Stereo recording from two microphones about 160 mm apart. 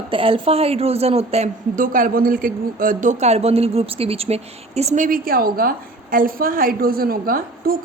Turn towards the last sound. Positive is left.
turn(degrees=-65)  # may be behind; listen again after turning